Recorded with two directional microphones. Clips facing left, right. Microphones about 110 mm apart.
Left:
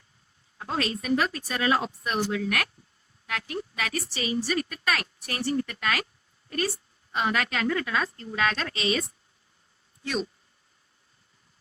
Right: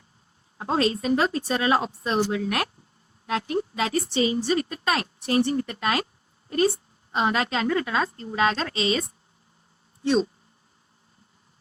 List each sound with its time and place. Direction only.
0.6 s a woman's voice: 30° right (ahead or behind)